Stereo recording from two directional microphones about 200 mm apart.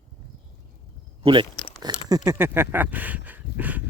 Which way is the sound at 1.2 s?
25° right (ahead or behind).